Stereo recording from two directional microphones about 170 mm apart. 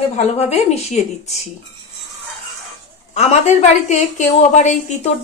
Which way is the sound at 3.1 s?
40° left (ahead or behind).